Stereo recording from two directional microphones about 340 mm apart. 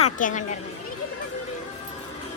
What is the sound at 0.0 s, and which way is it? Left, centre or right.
Speech, left.